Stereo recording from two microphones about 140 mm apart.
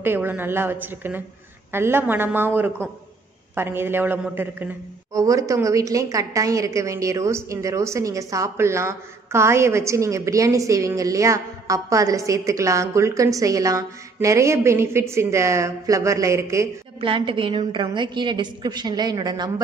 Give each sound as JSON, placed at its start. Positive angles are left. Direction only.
{"t": 0.0, "sound": "a woman's voice", "side_deg": -15}
{"t": 17.0, "sound": "a woman's voice", "side_deg": -40}